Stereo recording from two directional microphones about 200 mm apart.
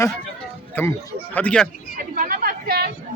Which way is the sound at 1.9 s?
45° right (ahead or behind).